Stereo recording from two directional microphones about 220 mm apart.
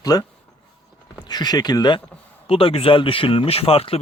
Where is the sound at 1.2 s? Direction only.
20° left (ahead or behind).